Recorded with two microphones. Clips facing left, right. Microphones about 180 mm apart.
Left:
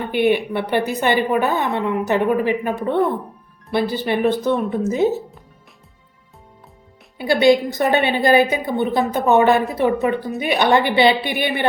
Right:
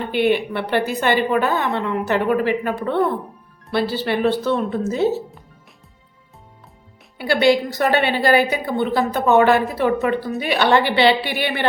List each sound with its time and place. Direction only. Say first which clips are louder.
0.1 s a woman's voice: left 1 dB; 15° left (ahead or behind)
7.2 s a woman's voice: left 2 dB; 20° left (ahead or behind)